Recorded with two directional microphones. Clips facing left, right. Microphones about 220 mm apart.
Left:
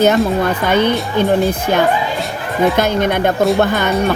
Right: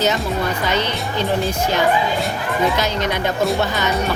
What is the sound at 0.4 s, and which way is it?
Speech, 55° left (ahead or behind).